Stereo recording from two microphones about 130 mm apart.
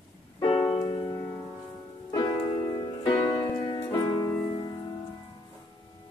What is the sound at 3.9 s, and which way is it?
Music, 25° left (ahead or behind).